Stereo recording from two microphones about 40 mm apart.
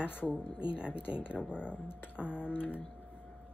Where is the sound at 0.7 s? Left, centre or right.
Right.